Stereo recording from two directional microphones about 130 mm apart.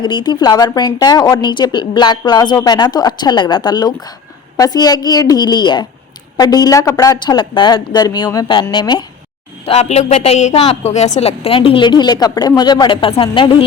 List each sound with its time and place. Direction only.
0.0 s a woman's voice: 35° left (ahead or behind)
9.6 s a woman's voice: 55° left (ahead or behind)